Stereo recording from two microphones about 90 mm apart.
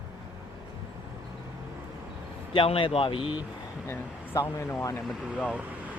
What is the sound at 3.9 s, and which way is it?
Speech, 35° left (ahead or behind).